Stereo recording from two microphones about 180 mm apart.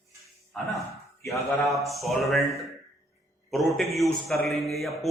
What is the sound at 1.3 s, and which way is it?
Speech, 15° left (ahead or behind).